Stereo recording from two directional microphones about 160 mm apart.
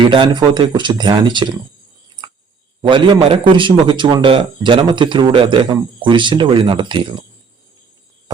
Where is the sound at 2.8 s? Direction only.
30° right (ahead or behind).